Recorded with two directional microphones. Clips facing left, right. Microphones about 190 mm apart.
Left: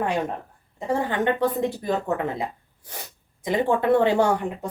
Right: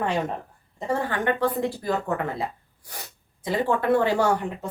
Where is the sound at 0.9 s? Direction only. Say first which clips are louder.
Left 2 dB; 15° left (ahead or behind).